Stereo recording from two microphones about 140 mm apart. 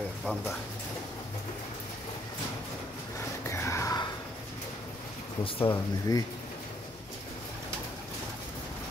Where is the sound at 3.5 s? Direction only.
20° left (ahead or behind).